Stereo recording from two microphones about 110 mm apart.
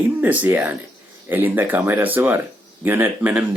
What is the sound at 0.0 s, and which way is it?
Speech, 15° right (ahead or behind).